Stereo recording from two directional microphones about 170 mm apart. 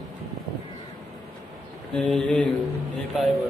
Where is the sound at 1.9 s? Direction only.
5° left (ahead or behind).